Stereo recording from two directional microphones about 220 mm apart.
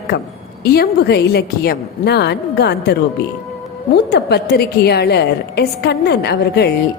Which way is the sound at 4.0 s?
45° left (ahead or behind).